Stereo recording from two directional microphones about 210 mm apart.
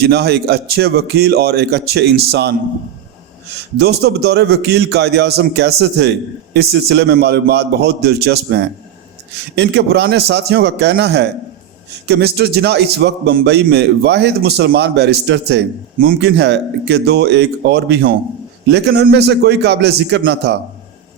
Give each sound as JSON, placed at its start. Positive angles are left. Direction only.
{"t": 0.0, "sound": "a man's voice", "side_deg": -50}
{"t": 3.8, "sound": "a man's voice", "side_deg": -50}